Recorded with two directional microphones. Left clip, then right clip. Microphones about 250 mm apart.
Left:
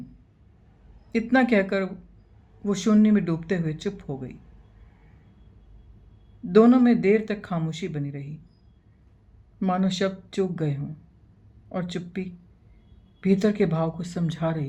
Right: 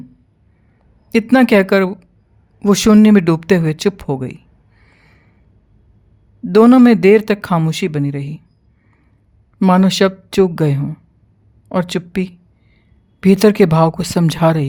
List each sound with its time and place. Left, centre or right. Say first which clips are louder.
1.1 s speech: right 10 dB; right
6.5 s speech: right 9 dB; right
9.6 s speech: right 13 dB; right